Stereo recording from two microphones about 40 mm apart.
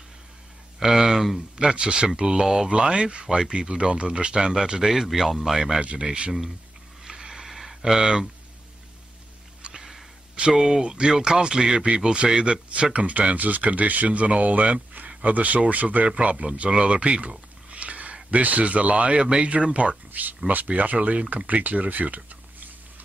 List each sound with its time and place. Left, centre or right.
0.7 s speech: centre
1.6 s speech: right
2.7 s speech: right
4.8 s speech: centre
7.1 s a sound: centre
9.6 s sniff: right
10.5 s speech: centre
12.9 s speech: right
17.6 s sniff: right
18.3 s speech: right
20.1 s a sound: right
20.4 s speech: right